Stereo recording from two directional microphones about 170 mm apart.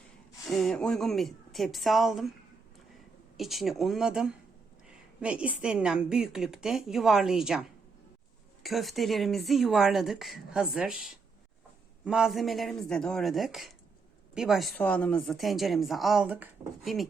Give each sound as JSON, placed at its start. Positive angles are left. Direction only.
{"t": 0.4, "sound": "speech", "side_deg": 0}
{"t": 3.3, "sound": "a woman's voice", "side_deg": 0}